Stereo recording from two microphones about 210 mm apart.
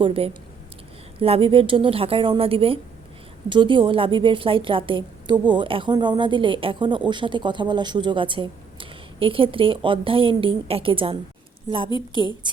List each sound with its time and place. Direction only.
0.0 s a woman's voice: 25° right (ahead or behind)